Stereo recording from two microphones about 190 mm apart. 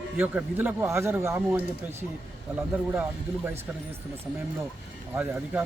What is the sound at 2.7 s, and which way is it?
Speech, 10° right (ahead or behind).